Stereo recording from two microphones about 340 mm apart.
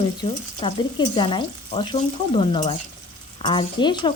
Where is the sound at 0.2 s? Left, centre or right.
Centre.